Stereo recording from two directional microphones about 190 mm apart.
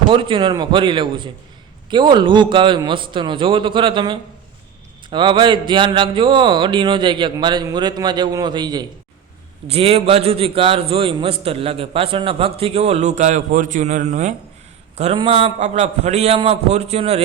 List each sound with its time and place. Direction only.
0.1 s a man's voice: 25° right (ahead or behind)